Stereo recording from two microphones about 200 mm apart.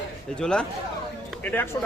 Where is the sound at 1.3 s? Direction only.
10° left (ahead or behind).